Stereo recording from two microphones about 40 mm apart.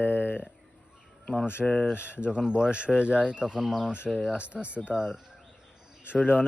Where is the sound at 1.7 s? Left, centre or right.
Left.